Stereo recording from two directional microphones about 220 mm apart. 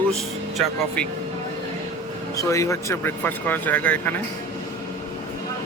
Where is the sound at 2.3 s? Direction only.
15° left (ahead or behind).